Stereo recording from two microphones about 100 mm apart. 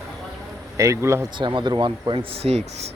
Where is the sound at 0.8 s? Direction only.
30° right (ahead or behind).